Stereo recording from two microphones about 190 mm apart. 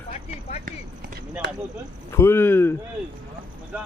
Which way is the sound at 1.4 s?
70° right (ahead or behind).